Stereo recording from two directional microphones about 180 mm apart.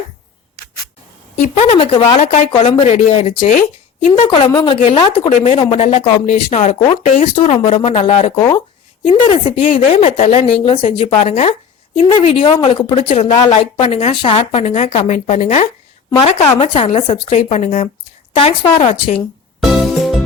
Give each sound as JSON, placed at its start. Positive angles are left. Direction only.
{"t": 1.4, "sound": "a woman's voice", "side_deg": 35}
{"t": 4.1, "sound": "a woman's voice", "side_deg": 25}
{"t": 11.0, "sound": "a woman's voice", "side_deg": 40}
{"t": 16.7, "sound": "a woman's voice", "side_deg": 30}
{"t": 19.5, "sound": "music", "side_deg": 0}